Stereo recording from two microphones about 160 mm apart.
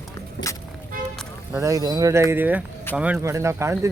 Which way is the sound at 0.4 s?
90° left.